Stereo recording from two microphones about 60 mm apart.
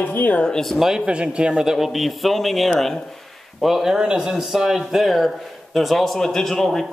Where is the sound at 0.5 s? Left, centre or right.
Centre.